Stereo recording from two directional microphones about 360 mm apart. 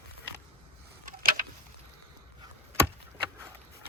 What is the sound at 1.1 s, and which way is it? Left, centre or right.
Tick-tock, right.